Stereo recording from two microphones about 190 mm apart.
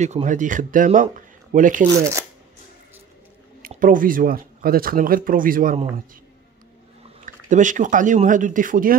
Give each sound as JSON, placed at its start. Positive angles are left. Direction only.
{"t": 0.0, "sound": "speech", "side_deg": -40}
{"t": 2.0, "sound": "speech", "side_deg": -15}
{"t": 3.6, "sound": "speech", "side_deg": -45}
{"t": 7.2, "sound": "speech", "side_deg": -40}